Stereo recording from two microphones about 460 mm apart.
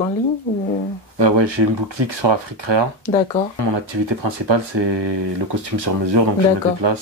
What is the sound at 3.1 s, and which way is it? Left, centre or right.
Speech, centre.